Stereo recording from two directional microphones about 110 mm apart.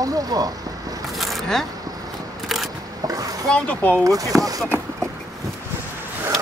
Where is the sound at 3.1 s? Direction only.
35° right (ahead or behind).